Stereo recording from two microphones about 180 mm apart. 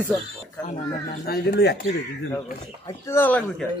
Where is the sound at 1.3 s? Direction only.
60° left (ahead or behind).